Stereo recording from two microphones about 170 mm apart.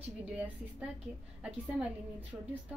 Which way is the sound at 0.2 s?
10° right (ahead or behind).